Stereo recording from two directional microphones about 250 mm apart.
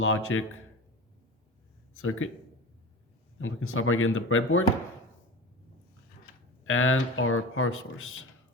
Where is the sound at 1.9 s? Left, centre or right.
Left.